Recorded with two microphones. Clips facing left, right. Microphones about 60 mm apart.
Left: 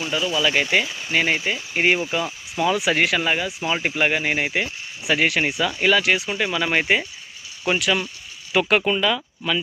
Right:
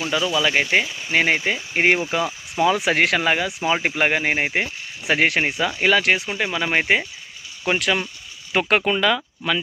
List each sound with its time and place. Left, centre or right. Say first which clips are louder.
0.1 s speech: right 1 dB; right
0.6 s speech: right 1 dB; right
0.9 s speech: even; centre
1.1 s speech: right 2 dB; right
6.2 s speech: left 1 dB; right
7.6 s speech: even; right